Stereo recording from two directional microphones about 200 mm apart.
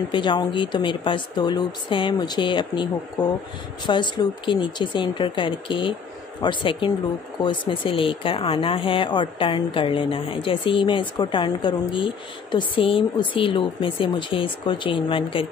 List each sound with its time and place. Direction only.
0.1 s speech: 25° left (ahead or behind)
3.2 s speech: 5° left (ahead or behind)
3.8 s speech: 25° left (ahead or behind)